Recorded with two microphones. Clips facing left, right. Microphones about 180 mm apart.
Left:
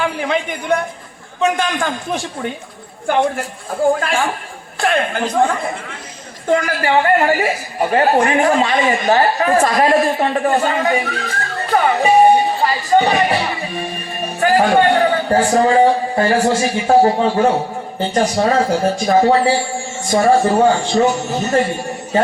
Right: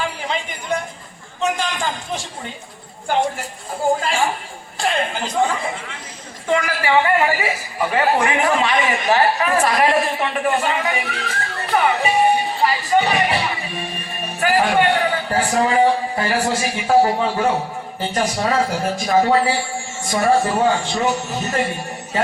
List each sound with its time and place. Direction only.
0.0 s a man's voice: 60° left (ahead or behind); by 11.1 s 35° left (ahead or behind)
11.7 s music: 45° left (ahead or behind)
12.9 s a woman's voice: 35° left (ahead or behind)